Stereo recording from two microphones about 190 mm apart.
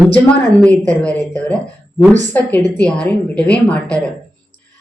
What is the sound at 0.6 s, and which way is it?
A woman's voice, 5° left (ahead or behind).